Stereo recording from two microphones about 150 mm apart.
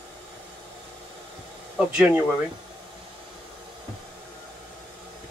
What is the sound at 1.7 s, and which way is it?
Speech, 5° right (ahead or behind).